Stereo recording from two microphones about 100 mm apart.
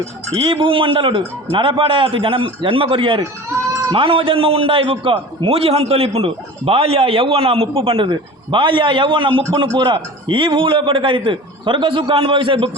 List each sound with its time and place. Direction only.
0.3 s a man's voice: 60° right (ahead or behind)